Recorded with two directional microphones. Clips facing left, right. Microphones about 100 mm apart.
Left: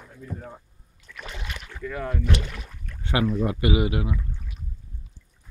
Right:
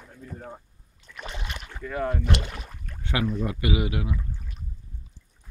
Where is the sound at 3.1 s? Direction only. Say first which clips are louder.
Left 3 dB; 25° left (ahead or behind).